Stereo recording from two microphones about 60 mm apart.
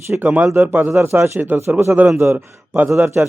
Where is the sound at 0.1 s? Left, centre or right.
Right.